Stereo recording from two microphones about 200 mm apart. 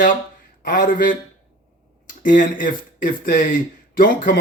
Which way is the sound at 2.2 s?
40° left (ahead or behind).